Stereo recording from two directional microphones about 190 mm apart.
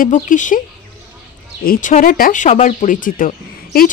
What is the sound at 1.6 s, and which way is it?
Speech, 45° left (ahead or behind).